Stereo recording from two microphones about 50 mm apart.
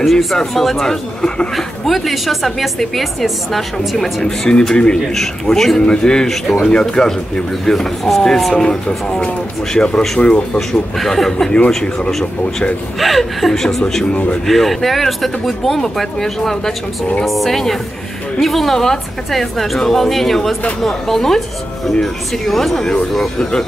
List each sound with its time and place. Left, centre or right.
0.0 s a woman's voice: centre
4.5 s speech: centre
5.1 s speech: centre
6.2 s a woman's voice: centre
6.6 s speech: centre
10.7 s a woman's voice: centre
14.1 s speech: left
14.4 s a woman's voice: centre